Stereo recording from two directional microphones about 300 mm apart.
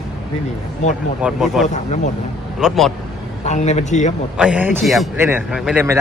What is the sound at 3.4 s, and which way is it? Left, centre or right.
Speech, left.